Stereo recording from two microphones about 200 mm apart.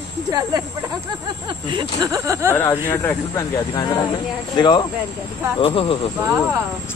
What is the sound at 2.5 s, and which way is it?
Speech, 15° left (ahead or behind).